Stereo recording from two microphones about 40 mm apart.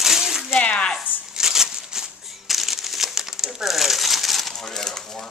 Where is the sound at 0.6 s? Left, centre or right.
Left.